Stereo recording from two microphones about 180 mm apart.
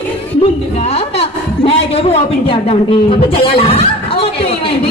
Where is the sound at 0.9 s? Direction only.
35° left (ahead or behind).